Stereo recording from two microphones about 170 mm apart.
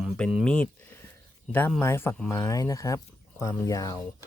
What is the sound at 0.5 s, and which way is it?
Speech, 10° left (ahead or behind).